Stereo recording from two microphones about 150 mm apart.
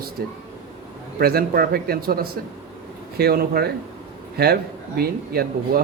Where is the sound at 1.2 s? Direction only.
90° right.